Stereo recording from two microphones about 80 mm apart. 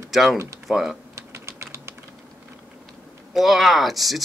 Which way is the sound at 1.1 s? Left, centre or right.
Right.